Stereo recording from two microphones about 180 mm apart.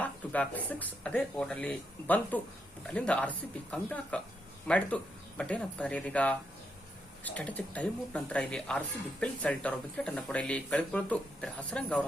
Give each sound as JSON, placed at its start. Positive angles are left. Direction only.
{"t": 0.0, "sound": "speech", "side_deg": 10}